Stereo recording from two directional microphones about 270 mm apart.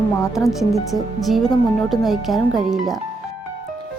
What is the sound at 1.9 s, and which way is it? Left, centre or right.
A woman's voice, centre.